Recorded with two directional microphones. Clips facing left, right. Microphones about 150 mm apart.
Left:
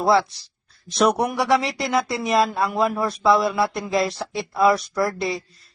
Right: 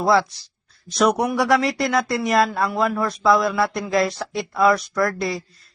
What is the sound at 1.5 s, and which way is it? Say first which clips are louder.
Speech: right 2 dB; 25° left (ahead or behind).